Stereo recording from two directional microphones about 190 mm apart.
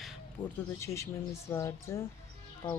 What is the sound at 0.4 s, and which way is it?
Speech, 25° left (ahead or behind).